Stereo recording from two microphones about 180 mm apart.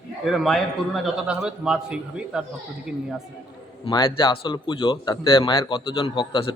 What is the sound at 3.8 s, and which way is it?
Speech, 25° left (ahead or behind).